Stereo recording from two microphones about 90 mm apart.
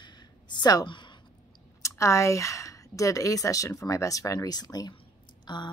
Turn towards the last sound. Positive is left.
turn(degrees=55)  # may be behind; listen again after turning